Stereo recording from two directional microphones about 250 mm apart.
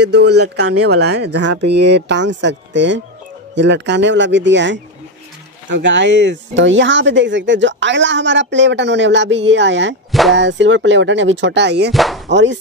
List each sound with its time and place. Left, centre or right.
0.0 s speech: right
11.9 s speech: centre
12.3 s speech: right